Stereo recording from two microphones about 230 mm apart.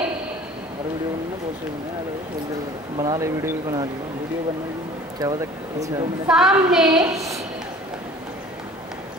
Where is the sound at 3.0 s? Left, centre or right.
Centre.